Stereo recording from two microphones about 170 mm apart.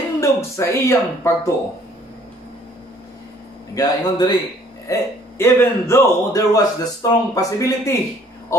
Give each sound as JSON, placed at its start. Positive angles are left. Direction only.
{"t": 0.2, "sound": "speech", "side_deg": 15}
{"t": 3.7, "sound": "a man's voice", "side_deg": 25}